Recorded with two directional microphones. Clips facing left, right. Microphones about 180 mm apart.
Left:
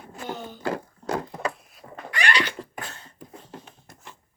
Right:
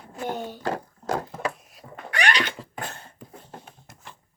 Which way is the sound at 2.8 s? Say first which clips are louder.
Right 3 dB; 55° right (ahead or behind).